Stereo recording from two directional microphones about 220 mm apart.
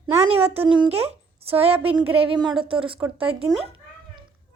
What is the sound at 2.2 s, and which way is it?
Speech, 20° right (ahead or behind).